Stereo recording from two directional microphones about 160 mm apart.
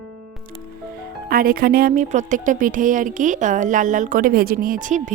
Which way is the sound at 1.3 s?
65° right (ahead or behind).